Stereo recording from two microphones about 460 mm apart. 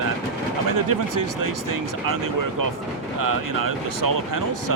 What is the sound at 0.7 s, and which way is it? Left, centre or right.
Speech, right.